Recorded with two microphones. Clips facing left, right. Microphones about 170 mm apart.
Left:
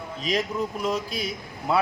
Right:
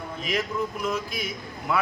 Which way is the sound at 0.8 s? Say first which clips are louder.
Left 2 dB; 35° left (ahead or behind).